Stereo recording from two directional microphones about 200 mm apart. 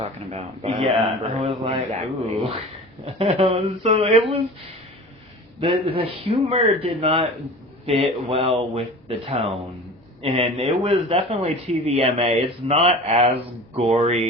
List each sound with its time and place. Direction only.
0.0 s speech: 30° right (ahead or behind)
5.5 s speech: 30° right (ahead or behind)